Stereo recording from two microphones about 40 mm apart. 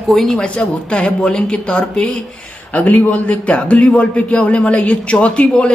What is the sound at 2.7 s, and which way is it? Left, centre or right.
A man's voice, left.